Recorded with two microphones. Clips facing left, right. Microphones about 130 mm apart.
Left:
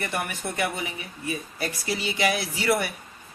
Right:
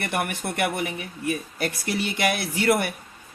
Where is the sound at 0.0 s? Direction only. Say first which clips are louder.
Right 3 dB; 60° right (ahead or behind).